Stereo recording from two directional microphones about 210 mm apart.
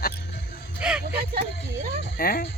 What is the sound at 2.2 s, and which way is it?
Speech, 45° left (ahead or behind).